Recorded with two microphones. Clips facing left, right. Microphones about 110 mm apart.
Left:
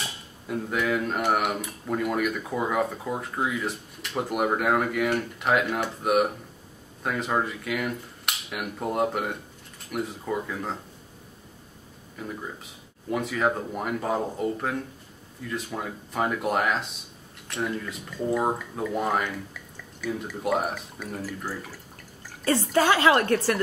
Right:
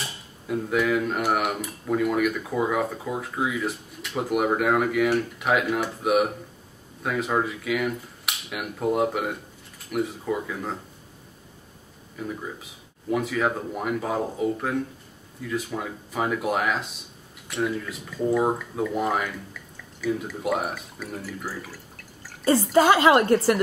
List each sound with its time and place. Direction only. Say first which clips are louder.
0.0 s cutlery: even; centre (ahead or behind)
13.1 s cutlery: right 1 dB; centre (ahead or behind)
20.0 s a woman's voice: right 3 dB; centre (ahead or behind); by 23.6 s 20° right (ahead or behind)